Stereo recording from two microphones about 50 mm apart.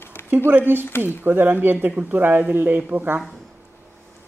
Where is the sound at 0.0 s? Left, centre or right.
Left.